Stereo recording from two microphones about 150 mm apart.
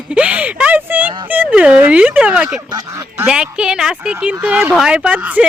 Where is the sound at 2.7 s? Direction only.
25° right (ahead or behind).